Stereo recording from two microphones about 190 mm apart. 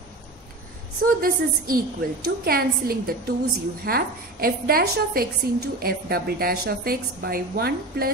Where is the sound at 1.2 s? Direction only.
50° right (ahead or behind).